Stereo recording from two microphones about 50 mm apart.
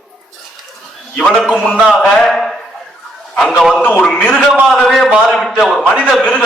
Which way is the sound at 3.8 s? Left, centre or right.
Left.